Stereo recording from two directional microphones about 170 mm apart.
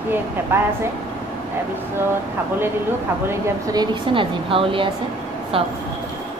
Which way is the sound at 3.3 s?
20° right (ahead or behind).